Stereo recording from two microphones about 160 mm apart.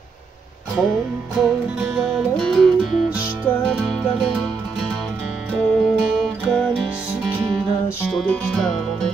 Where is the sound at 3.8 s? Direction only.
Centre (ahead or behind).